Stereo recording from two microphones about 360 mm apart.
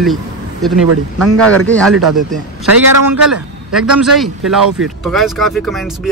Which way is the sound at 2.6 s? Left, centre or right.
Right.